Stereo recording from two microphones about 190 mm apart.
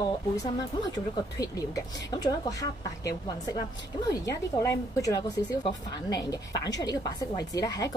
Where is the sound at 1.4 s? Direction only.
20° left (ahead or behind).